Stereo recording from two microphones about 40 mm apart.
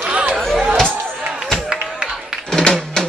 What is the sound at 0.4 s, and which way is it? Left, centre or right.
Music, centre.